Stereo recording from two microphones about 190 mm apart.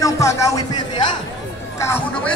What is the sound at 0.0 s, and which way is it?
Music, 15° left (ahead or behind).